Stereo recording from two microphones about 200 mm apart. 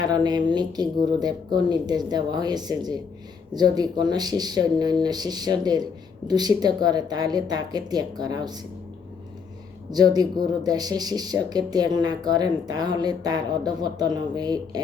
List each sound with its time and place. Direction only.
0.0 s speech: 20° right (ahead or behind)
9.9 s speech: 20° right (ahead or behind)